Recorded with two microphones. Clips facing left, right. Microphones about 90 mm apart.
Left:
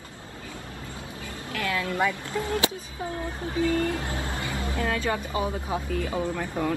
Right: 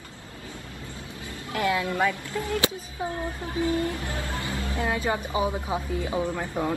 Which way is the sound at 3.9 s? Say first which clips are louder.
Left 1 dB; 25° left (ahead or behind).